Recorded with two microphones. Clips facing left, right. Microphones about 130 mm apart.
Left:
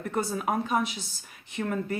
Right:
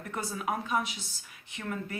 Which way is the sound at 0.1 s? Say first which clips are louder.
Left 5 dB; 40° left (ahead or behind).